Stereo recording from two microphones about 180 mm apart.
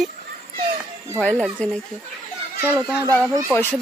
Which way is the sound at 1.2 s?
5° left (ahead or behind).